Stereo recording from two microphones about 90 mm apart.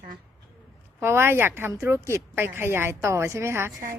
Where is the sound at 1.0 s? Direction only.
30° right (ahead or behind).